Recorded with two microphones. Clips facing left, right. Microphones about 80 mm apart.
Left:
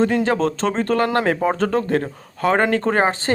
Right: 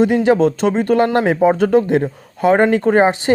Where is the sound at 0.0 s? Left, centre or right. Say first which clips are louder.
Right 5 dB; centre.